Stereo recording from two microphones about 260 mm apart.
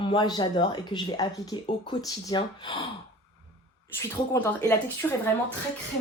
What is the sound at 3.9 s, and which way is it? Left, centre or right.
Speech, centre.